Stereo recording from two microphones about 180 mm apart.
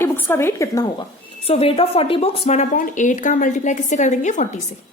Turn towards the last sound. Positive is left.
turn(degrees=45)  # may be behind; listen again after turning